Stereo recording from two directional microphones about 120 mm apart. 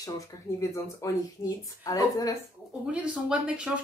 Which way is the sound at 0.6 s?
25° left (ahead or behind).